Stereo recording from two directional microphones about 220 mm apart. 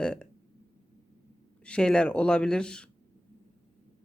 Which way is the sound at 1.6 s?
5° left (ahead or behind).